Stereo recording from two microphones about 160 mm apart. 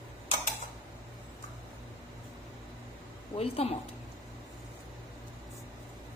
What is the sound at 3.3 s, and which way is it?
Speech, 40° left (ahead or behind).